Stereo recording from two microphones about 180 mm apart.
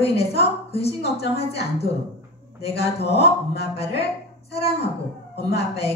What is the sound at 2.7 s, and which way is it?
Speech, 65° left (ahead or behind).